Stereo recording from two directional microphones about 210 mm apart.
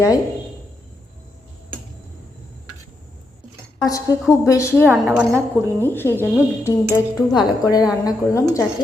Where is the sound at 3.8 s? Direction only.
15° left (ahead or behind).